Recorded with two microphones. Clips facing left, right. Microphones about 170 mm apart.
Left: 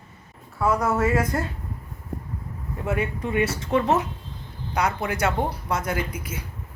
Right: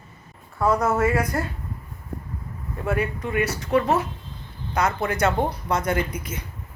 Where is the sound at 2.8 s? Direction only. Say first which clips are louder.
Right 1 dB; 20° left (ahead or behind); by 6.4 s 5° left (ahead or behind).